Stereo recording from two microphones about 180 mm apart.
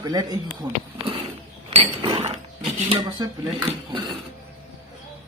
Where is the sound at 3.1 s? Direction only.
25° right (ahead or behind).